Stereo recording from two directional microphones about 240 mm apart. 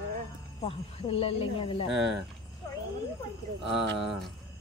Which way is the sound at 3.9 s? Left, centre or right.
Centre.